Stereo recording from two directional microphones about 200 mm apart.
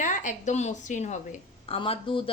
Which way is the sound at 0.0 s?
40° left (ahead or behind).